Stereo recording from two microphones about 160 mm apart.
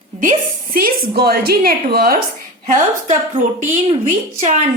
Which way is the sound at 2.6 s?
50° right (ahead or behind).